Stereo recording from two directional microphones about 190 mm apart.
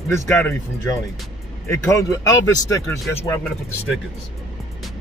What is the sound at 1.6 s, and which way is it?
Speech, 15° left (ahead or behind).